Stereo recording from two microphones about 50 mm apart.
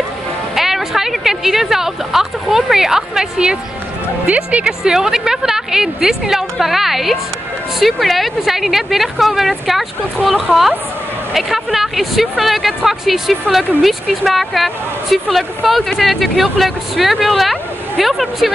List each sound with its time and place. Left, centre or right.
0.6 s a sound: centre
4.5 s a woman's voice: right
4.8 s a woman's voice: centre